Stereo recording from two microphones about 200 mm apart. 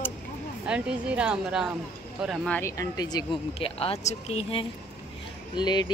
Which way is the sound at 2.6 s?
15° left (ahead or behind).